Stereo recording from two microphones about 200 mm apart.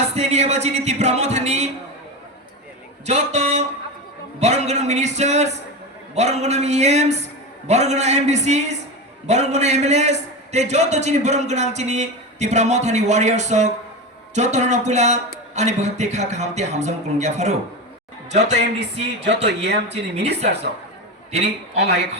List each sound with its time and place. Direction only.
0.2 s a man's voice: 30° right (ahead or behind)
3.1 s a man's voice: 35° right (ahead or behind)
18.8 s speech: 60° right (ahead or behind)
21.8 s speech: 55° right (ahead or behind)